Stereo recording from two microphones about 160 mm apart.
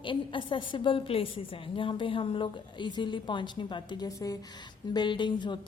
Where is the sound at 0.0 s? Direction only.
30° left (ahead or behind).